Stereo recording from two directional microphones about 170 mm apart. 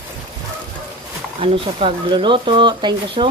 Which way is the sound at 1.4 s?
30° right (ahead or behind).